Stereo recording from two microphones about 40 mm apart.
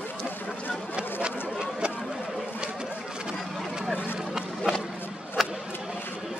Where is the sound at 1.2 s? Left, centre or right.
Right.